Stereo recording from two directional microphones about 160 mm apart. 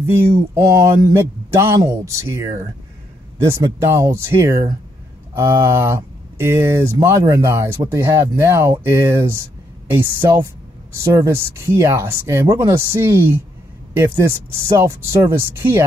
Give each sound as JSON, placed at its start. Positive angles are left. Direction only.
{"t": 0.0, "sound": "speech", "side_deg": -15}